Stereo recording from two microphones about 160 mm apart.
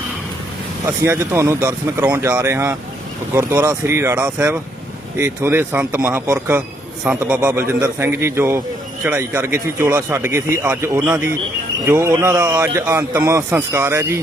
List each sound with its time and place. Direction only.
0.9 s a man's voice: 15° right (ahead or behind)